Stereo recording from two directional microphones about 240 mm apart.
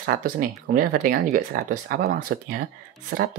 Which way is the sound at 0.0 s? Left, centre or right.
Right.